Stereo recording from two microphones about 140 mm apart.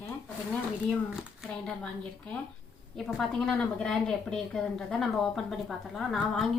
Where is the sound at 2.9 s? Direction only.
Centre (ahead or behind).